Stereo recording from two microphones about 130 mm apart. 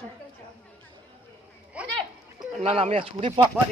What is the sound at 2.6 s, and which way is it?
Speech, 50° right (ahead or behind).